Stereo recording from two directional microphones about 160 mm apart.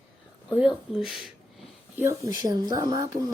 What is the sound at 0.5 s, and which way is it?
Speech, 5° right (ahead or behind).